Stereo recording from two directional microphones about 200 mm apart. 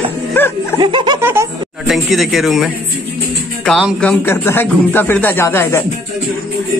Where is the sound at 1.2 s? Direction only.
10° right (ahead or behind).